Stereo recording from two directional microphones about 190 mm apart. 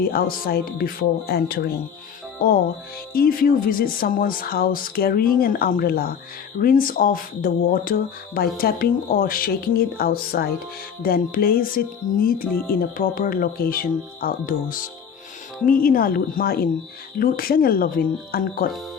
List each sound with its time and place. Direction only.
0.0 s speech: 50° left (ahead or behind)
3.1 s speech: 50° left (ahead or behind)